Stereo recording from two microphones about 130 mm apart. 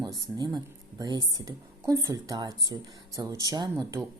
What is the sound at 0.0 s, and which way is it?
Speech, 30° right (ahead or behind).